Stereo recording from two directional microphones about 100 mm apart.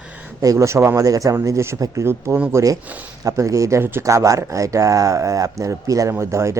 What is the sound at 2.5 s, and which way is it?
Speech, 35° right (ahead or behind).